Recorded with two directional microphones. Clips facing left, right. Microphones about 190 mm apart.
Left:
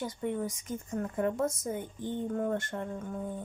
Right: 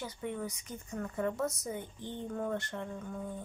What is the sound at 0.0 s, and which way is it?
Speech, 45° left (ahead or behind).